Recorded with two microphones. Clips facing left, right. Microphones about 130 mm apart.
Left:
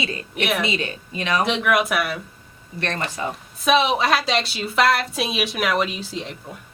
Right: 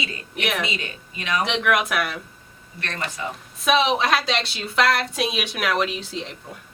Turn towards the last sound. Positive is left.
turn(degrees=0)  # may be behind; listen again after turning